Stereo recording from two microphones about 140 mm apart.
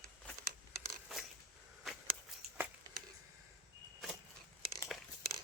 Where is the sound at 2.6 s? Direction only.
15° right (ahead or behind).